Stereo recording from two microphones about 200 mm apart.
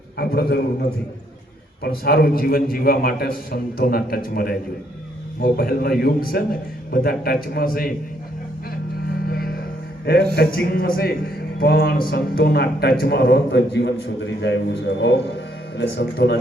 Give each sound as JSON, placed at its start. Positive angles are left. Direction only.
{"t": 0.2, "sound": "a man's voice", "side_deg": 50}
{"t": 9.2, "sound": "music", "side_deg": 50}
{"t": 10.3, "sound": "a man's voice", "side_deg": 50}